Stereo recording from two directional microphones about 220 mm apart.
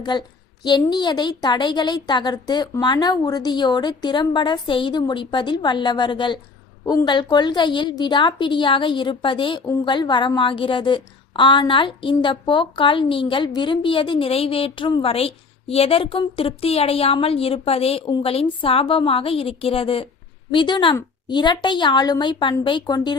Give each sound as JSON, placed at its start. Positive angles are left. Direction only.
{"t": 0.0, "sound": "a woman's voice", "side_deg": 20}